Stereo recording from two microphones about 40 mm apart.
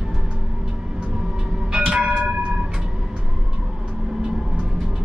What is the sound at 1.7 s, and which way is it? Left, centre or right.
Music, centre.